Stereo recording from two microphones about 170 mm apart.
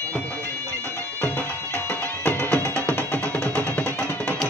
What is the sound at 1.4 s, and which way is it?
Music, 10° left (ahead or behind).